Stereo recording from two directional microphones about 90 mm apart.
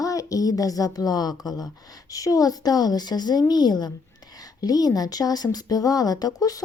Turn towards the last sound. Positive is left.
turn(degrees=45)  # may be behind; listen again after turning